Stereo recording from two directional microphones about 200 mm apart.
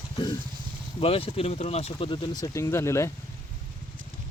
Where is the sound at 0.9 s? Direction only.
30° left (ahead or behind).